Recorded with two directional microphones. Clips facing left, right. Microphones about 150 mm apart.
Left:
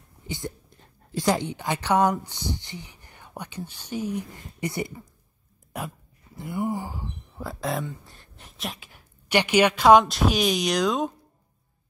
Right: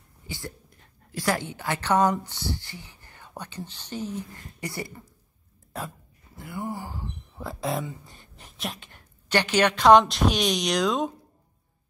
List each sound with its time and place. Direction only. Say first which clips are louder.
1.1 s a woman's voice: left 3 dB; 20° left (ahead or behind)
6.3 s a sound: left 5 dB; 20° left (ahead or behind)
7.3 s speech: even; centre (ahead or behind)